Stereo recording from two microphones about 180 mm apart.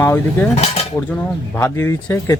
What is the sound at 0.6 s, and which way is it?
Cutlery, 35° left (ahead or behind).